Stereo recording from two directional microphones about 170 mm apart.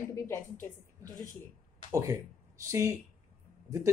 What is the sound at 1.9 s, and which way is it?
Speech, 20° right (ahead or behind).